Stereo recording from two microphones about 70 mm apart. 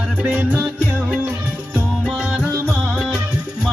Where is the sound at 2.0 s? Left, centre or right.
Centre.